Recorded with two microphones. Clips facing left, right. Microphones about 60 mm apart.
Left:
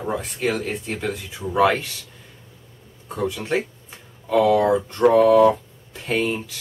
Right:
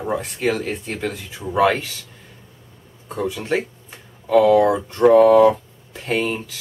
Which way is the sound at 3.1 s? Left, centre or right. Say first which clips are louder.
Right 1 dB; centre.